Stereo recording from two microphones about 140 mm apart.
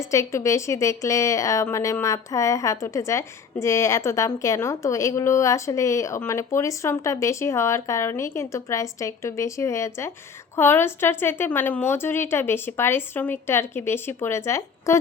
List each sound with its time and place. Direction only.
0.0 s a woman's voice: 20° left (ahead or behind)